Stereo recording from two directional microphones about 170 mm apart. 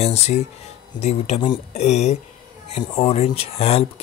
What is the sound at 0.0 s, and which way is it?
A man's voice, 40° left (ahead or behind).